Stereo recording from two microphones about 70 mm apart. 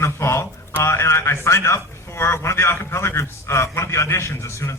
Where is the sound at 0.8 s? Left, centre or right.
Left.